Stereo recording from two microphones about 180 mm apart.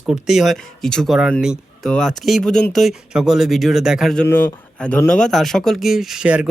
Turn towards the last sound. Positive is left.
turn(degrees=-5)  # may be behind; listen again after turning